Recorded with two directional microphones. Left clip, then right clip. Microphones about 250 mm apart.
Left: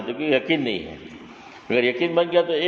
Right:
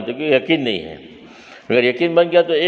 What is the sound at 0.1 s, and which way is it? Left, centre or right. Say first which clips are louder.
A man's voice: right 5 dB; right.